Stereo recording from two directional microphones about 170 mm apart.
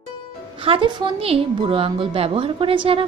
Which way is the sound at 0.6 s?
30° right (ahead or behind).